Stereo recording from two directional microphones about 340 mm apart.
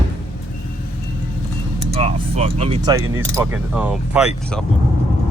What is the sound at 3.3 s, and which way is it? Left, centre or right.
Speech, centre.